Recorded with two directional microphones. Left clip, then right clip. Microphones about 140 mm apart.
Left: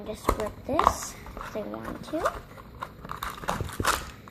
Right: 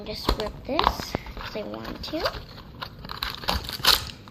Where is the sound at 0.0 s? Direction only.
15° left (ahead or behind).